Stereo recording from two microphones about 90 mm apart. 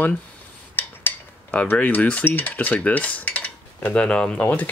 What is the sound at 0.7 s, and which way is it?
Cutlery, 20° left (ahead or behind).